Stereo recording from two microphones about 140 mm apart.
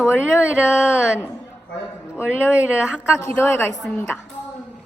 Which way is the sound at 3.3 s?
15° left (ahead or behind).